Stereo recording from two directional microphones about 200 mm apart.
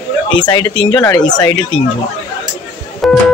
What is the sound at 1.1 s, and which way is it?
Speech, 20° left (ahead or behind).